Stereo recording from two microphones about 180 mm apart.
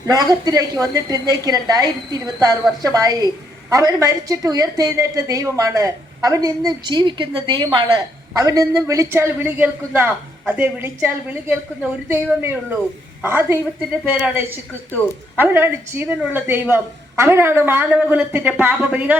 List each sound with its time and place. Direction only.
0.0 s a woman's voice: 20° right (ahead or behind)
15.4 s a woman's voice: 10° right (ahead or behind)